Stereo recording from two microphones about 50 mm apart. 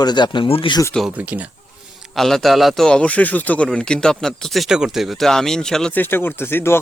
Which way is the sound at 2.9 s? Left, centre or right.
Left.